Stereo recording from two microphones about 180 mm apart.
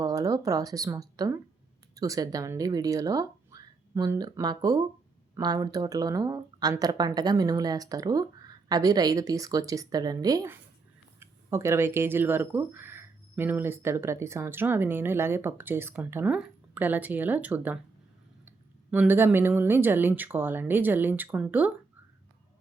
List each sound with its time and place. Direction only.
0.0 s speech: 20° right (ahead or behind)